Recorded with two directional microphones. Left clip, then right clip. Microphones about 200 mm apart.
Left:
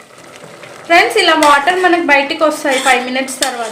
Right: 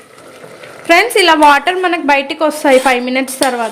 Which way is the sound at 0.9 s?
55° right (ahead or behind).